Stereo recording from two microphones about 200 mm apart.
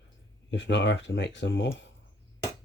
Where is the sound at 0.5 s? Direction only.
60° left (ahead or behind).